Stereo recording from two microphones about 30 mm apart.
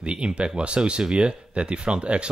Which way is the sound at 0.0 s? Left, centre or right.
Right.